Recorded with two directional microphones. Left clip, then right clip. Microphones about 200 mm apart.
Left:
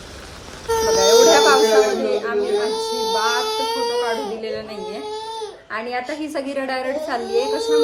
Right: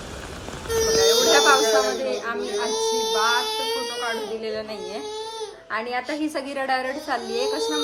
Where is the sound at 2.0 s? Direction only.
15° right (ahead or behind).